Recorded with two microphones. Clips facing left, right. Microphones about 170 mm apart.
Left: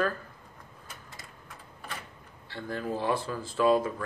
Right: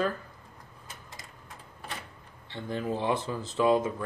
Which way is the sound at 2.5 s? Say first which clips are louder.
Right 1 dB; 20° right (ahead or behind).